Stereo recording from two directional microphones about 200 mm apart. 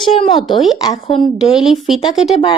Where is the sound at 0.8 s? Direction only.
20° left (ahead or behind).